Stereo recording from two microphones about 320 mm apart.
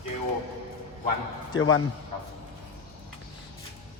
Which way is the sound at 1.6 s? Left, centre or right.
Left.